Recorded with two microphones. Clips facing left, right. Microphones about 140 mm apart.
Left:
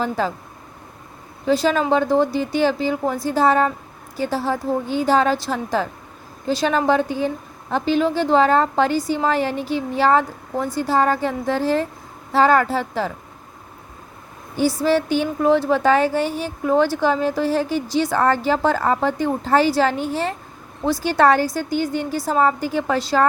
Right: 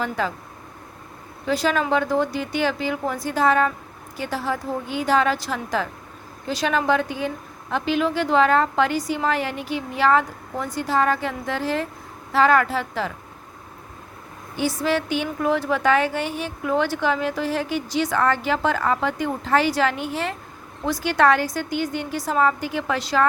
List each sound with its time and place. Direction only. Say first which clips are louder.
0.0 s a woman's voice: left 3 dB; 35° left (ahead or behind)
1.6 s a woman's voice: left 1 dB; 30° left (ahead or behind)
14.5 s a woman's voice: left 5 dB; 35° left (ahead or behind)